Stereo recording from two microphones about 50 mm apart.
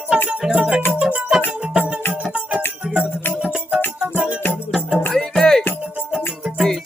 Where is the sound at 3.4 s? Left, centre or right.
Centre.